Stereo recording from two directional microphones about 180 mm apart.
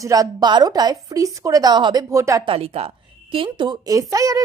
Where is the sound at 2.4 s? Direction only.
30° right (ahead or behind).